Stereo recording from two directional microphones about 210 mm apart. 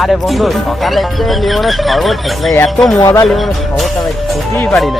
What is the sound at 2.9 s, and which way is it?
Speech, 15° left (ahead or behind).